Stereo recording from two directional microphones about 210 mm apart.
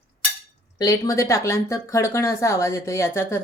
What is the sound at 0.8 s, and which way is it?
Speech, 15° left (ahead or behind).